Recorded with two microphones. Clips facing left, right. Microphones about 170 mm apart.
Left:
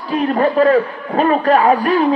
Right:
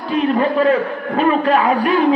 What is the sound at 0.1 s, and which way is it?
A man's voice, 40° left (ahead or behind).